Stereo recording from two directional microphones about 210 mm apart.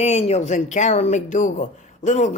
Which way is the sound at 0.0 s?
30° left (ahead or behind).